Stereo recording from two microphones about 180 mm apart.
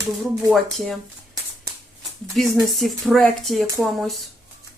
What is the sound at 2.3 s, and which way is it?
Speech, centre (ahead or behind).